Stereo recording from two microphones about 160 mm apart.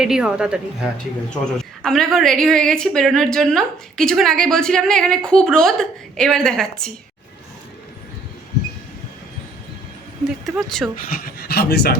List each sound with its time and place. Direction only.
0.0 s a woman's voice: 5° right (ahead or behind)
10.2 s a woman's voice: centre (ahead or behind)
10.9 s speech: 70° left (ahead or behind)